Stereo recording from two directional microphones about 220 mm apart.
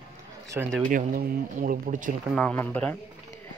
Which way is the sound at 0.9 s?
40° right (ahead or behind).